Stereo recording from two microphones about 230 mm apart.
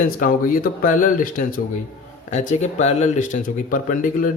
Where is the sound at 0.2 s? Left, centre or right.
Left.